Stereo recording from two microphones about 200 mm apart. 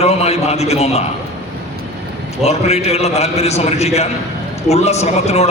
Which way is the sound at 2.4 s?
30° left (ahead or behind).